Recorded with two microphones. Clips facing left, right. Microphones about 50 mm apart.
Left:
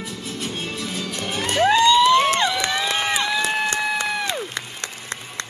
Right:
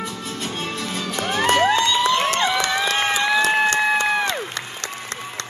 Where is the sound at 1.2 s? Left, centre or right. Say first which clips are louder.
Right 3 dB; right.